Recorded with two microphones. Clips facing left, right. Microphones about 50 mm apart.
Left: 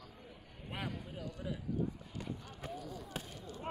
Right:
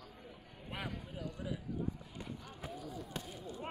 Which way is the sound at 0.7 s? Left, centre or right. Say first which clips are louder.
Left 1 dB; centre.